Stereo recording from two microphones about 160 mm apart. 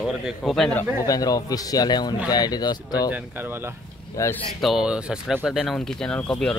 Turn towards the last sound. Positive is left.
turn(degrees=5)  # may be behind; listen again after turning